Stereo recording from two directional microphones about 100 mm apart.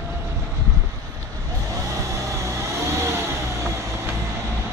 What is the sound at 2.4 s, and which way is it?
Vehicle, 30° right (ahead or behind).